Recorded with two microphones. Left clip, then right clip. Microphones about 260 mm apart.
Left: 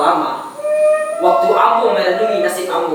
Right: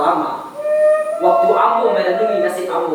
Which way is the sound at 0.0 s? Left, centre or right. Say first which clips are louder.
Left 2 dB; centre.